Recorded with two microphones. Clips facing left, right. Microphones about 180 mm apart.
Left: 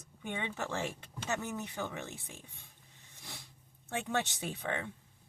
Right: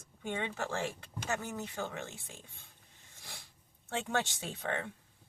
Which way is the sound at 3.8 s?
20° left (ahead or behind).